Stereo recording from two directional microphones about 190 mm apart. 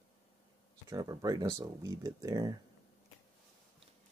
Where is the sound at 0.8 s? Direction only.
20° right (ahead or behind).